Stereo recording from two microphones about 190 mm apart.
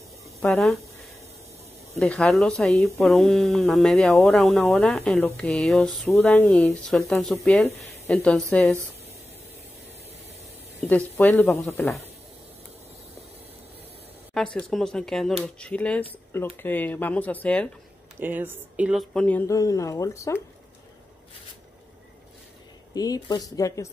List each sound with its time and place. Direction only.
0.4 s speech: centre (ahead or behind)
2.0 s speech: centre (ahead or behind)
10.8 s speech: 10° left (ahead or behind)
14.3 s speech: 5° left (ahead or behind)
18.2 s speech: 10° right (ahead or behind); by 20.3 s 15° left (ahead or behind)
22.9 s speech: 20° left (ahead or behind)